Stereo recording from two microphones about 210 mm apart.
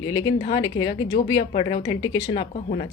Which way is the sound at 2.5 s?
40° left (ahead or behind).